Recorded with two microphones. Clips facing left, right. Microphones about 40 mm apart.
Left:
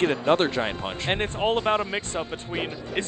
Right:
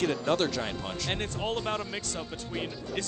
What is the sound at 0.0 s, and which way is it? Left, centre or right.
Speech, left.